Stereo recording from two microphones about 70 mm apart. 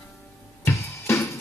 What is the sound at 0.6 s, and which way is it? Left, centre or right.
Music, left.